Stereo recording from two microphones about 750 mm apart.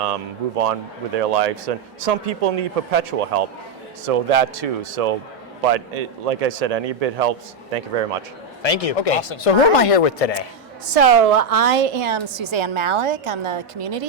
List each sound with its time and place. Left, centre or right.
0.0 s a man's voice: right
8.6 s speech: left
10.9 s a woman's voice: right